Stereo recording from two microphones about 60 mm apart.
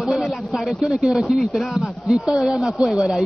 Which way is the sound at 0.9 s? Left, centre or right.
Centre.